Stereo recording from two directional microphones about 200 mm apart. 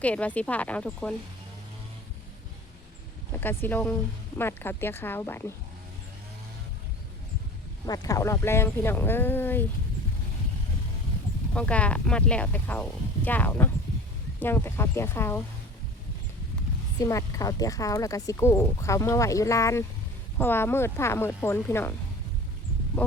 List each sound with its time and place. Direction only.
0.0 s speech: 5° left (ahead or behind)
3.3 s speech: 10° left (ahead or behind)
7.9 s speech: 20° left (ahead or behind)
11.5 s speech: 5° left (ahead or behind)
17.0 s speech: 15° left (ahead or behind)
23.0 s speech: 5° left (ahead or behind)